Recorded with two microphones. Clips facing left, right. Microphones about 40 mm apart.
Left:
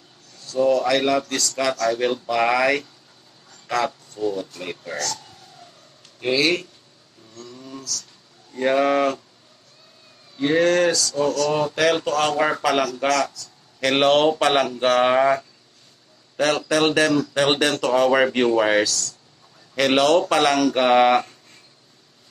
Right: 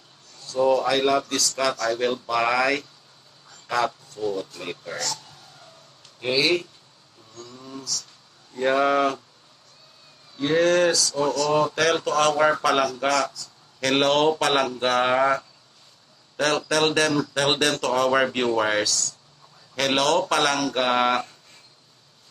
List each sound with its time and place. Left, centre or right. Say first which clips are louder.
0.6 s speech: left 2 dB; centre
4.9 s speech: left 3 dB; centre
6.1 s speech: left 2 dB; centre
7.3 s a sound: left 1 dB; centre
8.5 s speech: left 2 dB; centre
10.3 s speech: left 2 dB; centre
13.7 s speech: left 3 dB; centre